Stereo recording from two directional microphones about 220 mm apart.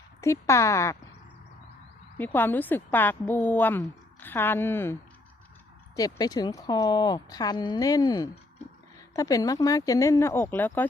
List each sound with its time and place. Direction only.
0.2 s a woman's voice: 15° left (ahead or behind)
2.1 s a woman's voice: 10° left (ahead or behind)
6.0 s a woman's voice: 15° left (ahead or behind)